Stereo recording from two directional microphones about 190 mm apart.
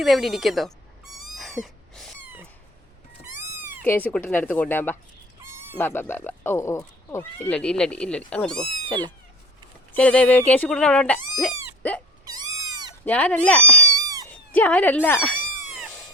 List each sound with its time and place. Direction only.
0.0 s speech: centre (ahead or behind)
1.1 s cat: centre (ahead or behind)
3.8 s speech: 10° left (ahead or behind)
13.1 s speech: 5° left (ahead or behind)
13.8 s cat: 15° right (ahead or behind)
14.5 s speech: 10° left (ahead or behind)